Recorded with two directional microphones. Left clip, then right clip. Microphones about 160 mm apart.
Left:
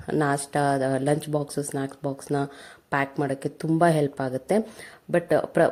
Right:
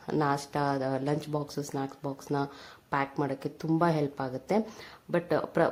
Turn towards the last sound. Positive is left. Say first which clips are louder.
# left 6 dB
turn(degrees=15)  # may be behind; listen again after turning